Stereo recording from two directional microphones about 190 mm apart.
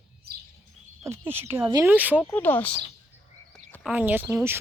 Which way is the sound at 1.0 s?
10° right (ahead or behind).